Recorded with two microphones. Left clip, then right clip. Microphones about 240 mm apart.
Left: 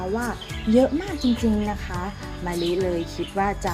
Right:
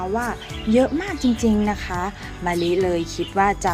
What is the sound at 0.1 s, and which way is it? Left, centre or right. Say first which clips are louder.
Speech: right 3 dB; centre.